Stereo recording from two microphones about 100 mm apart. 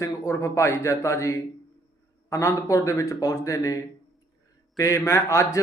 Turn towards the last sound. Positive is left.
turn(degrees=30)  # may be behind; listen again after turning